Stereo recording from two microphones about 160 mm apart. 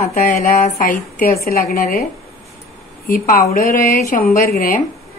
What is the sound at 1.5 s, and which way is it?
Speech, 70° left (ahead or behind).